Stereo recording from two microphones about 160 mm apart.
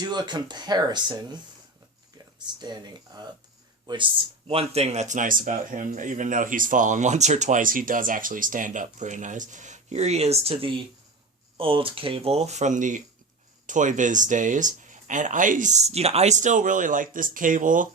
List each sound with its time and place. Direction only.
0.0 s speech: 25° right (ahead or behind)
4.4 s speech: 40° right (ahead or behind); by 17.8 s 55° right (ahead or behind)